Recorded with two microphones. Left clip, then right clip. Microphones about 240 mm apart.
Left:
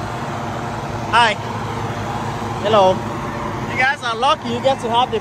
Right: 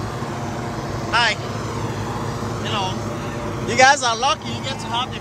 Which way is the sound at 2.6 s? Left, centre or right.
Left.